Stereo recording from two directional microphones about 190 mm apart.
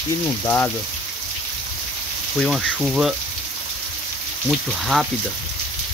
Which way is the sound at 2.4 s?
Centre (ahead or behind).